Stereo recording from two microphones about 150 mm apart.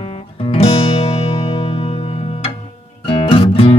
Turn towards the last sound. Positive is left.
turn(degrees=40)  # may be behind; listen again after turning